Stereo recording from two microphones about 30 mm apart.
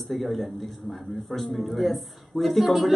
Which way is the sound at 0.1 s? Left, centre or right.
Centre.